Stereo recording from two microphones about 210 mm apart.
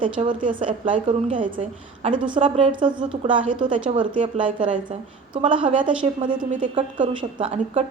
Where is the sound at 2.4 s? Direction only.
25° right (ahead or behind).